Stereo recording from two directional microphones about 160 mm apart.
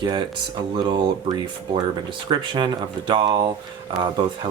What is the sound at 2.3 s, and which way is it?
Speech, 30° right (ahead or behind).